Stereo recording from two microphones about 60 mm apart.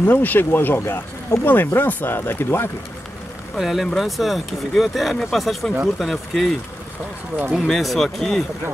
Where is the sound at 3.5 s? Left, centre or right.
Centre.